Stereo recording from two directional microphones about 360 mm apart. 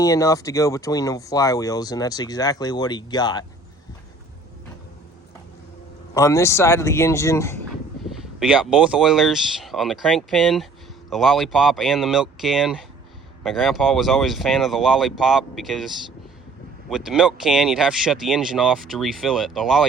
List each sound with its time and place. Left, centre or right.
0.0 s speech: centre
6.1 s speech: centre
16.9 s speech: centre